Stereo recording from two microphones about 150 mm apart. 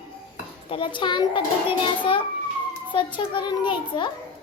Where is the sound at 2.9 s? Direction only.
30° left (ahead or behind).